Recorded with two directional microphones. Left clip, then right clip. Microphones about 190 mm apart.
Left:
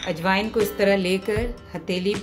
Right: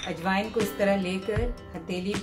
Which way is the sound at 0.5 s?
Centre (ahead or behind).